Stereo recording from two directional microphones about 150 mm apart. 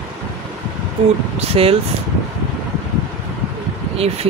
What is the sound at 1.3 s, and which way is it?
Speech, 40° right (ahead or behind).